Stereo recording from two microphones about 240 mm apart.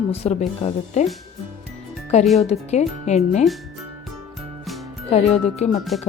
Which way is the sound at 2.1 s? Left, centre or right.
Left.